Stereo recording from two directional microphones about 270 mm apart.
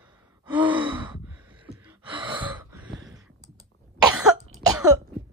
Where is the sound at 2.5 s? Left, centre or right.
Centre.